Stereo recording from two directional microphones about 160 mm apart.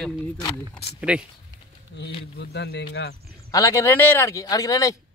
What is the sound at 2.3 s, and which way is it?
Speech, 90° left.